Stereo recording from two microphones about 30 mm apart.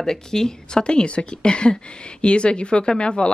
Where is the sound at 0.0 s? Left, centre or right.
Centre.